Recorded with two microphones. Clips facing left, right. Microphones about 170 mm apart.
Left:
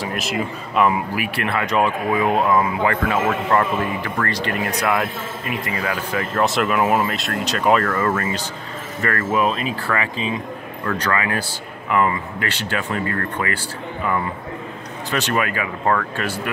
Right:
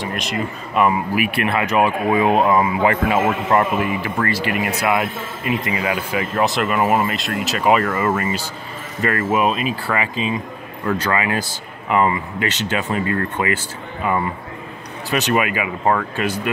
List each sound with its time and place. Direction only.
0.0 s speech: centre (ahead or behind)
1.1 s speech: 15° right (ahead or behind)
2.0 s speech: 25° right (ahead or behind); by 5.0 s 5° right (ahead or behind)
5.4 s speech: 15° right (ahead or behind)
6.4 s speech: centre (ahead or behind); by 13.6 s 20° right (ahead or behind)
15.0 s speech: 15° right (ahead or behind)